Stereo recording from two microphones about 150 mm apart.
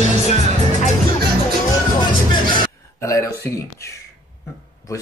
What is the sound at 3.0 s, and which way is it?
Speech, 20° left (ahead or behind).